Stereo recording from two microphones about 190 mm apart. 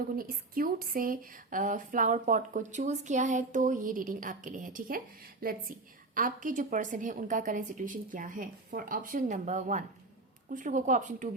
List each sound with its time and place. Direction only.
0.2 s speech: 50° right (ahead or behind)